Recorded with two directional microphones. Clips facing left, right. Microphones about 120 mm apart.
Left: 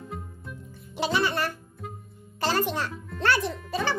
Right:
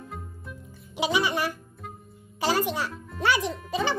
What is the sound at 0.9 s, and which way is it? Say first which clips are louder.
A child's voice: even; 10° right (ahead or behind).